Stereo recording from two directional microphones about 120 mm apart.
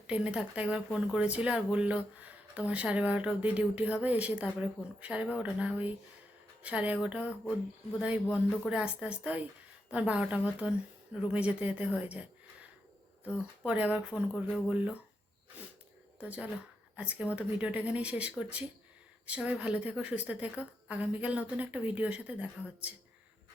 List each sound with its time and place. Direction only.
0.1 s a woman's voice: 10° right (ahead or behind)
13.7 s a woman's voice: 10° right (ahead or behind)
16.2 s a woman's voice: 10° right (ahead or behind)